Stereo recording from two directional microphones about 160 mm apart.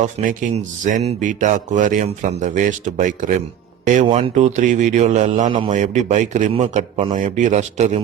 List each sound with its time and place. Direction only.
0.0 s speech: 50° right (ahead or behind)
5.5 s a man's voice: 35° right (ahead or behind)
5.8 s speech: 45° right (ahead or behind)